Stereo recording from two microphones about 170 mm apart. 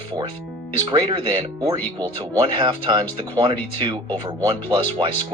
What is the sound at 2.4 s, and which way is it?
Speech, 30° right (ahead or behind).